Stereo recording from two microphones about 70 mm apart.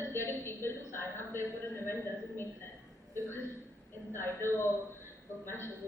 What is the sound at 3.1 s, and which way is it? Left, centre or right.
A woman's voice, left.